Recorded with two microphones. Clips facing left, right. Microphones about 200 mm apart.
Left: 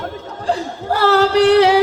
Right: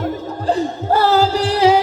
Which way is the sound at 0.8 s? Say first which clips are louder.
Left 1 dB; 80° left.